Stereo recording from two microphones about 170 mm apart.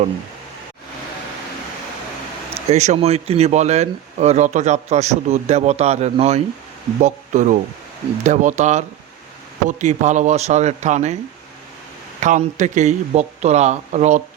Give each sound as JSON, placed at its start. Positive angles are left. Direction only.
{"t": 2.6, "sound": "a man's voice", "side_deg": -40}
{"t": 12.2, "sound": "a man's voice", "side_deg": -45}